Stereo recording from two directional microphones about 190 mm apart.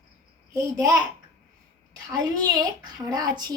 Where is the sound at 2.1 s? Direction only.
20° right (ahead or behind).